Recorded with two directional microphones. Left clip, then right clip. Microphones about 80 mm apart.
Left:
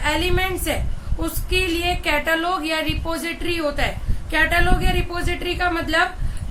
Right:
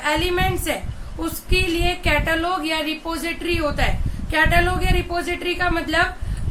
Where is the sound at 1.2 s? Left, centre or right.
Centre; by 6.0 s left.